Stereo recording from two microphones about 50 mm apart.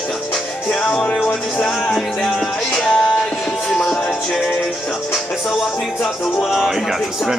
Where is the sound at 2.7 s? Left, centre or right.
Centre.